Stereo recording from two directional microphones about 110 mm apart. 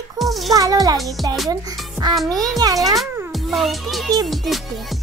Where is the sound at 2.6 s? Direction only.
35° right (ahead or behind).